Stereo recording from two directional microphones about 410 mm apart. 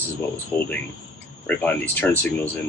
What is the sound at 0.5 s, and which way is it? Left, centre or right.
Speech, centre.